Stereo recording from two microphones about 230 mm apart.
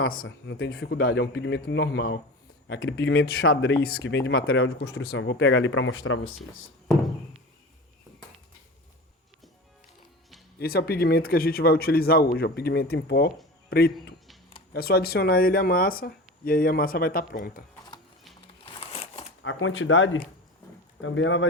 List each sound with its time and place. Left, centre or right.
0.1 s speech: left
10.6 s speech: left
18.6 s crumpling: left
19.4 s speech: left